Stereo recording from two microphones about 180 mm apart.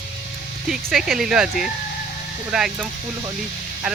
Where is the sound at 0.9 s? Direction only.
Centre (ahead or behind).